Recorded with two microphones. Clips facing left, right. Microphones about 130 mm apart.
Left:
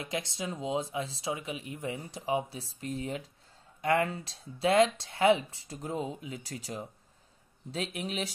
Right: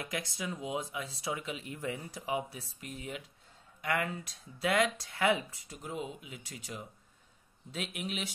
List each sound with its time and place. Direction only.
0.0 s speech: 25° left (ahead or behind)